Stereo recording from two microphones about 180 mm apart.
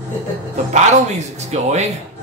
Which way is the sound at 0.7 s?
40° right (ahead or behind).